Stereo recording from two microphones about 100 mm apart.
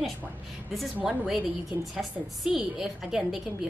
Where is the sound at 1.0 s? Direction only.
5° right (ahead or behind).